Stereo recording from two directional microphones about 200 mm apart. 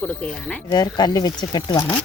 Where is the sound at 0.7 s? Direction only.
20° left (ahead or behind).